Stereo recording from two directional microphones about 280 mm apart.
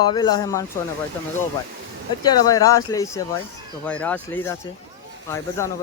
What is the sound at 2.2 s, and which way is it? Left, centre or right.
Speech, centre.